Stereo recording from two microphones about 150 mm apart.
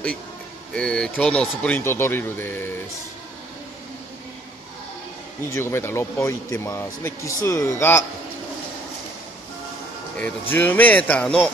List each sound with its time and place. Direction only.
0.7 s speech: 5° left (ahead or behind)
5.4 s speech: 15° left (ahead or behind)
10.5 s speech: 10° left (ahead or behind)